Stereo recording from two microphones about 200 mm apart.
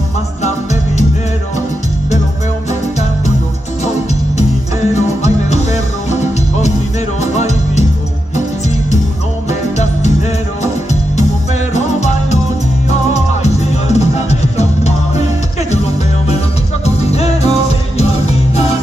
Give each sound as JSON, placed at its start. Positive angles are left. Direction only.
{"t": 4.9, "sound": "music", "side_deg": 35}
{"t": 7.3, "sound": "music", "side_deg": 35}
{"t": 9.5, "sound": "music", "side_deg": 35}
{"t": 11.7, "sound": "music", "side_deg": 35}
{"t": 13.9, "sound": "music", "side_deg": 35}
{"t": 16.8, "sound": "music", "side_deg": 30}